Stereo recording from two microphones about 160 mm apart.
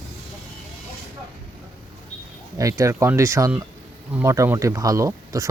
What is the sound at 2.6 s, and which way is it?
Speech, 20° right (ahead or behind).